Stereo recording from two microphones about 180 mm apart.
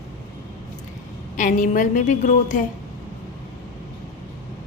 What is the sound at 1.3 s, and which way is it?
A woman's voice, 45° left (ahead or behind).